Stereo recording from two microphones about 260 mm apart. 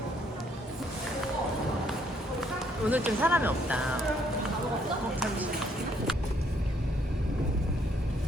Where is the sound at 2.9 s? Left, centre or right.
Centre.